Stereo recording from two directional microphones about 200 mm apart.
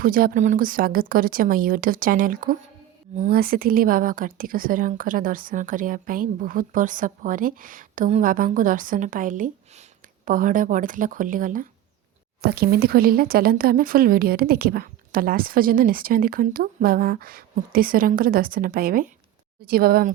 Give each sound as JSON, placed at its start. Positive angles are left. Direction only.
{"t": 0.0, "sound": "a woman's voice", "side_deg": -45}